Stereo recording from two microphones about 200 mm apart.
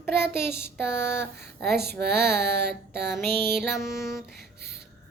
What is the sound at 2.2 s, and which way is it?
Child singing, 10° left (ahead or behind).